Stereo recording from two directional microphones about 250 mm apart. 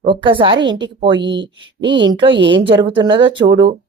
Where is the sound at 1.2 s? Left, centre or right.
Right.